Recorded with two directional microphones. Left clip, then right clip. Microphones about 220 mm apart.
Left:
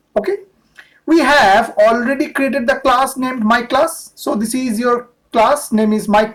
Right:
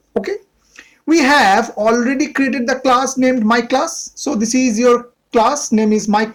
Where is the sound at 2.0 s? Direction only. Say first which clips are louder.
Even; 30° right (ahead or behind).